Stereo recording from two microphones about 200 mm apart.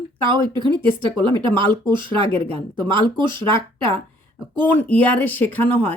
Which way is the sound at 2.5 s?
25° right (ahead or behind).